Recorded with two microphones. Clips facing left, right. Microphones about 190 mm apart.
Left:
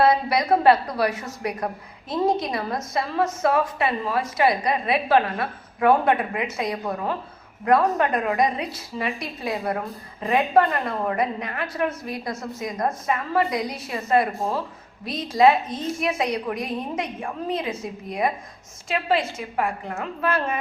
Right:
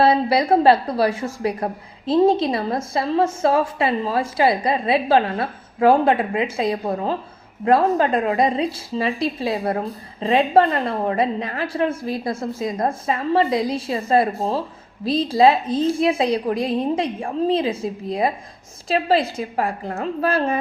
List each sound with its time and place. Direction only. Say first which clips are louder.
0.0 s a woman's voice: right 3 dB; 30° right (ahead or behind)